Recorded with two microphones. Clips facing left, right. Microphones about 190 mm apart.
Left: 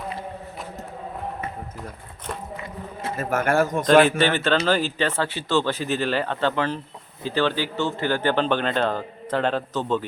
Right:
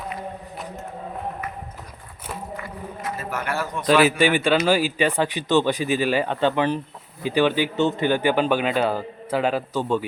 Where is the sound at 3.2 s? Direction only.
45° left (ahead or behind).